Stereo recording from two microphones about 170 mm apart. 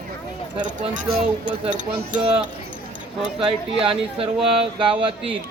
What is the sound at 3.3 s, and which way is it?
Speech, 30° right (ahead or behind).